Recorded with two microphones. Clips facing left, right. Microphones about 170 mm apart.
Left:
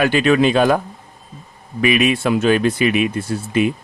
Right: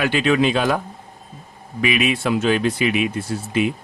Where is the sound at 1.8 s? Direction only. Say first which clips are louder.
Left 4 dB; 50° left (ahead or behind).